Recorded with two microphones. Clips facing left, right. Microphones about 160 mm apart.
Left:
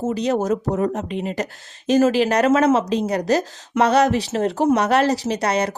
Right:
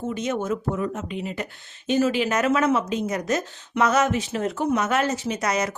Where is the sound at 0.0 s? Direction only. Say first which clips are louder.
Left 6 dB; 35° left (ahead or behind).